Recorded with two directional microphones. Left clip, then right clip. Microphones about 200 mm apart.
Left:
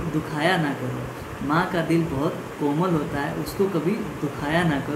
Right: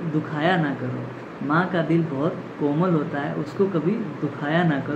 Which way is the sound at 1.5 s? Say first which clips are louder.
Right 1 dB; 10° left (ahead or behind).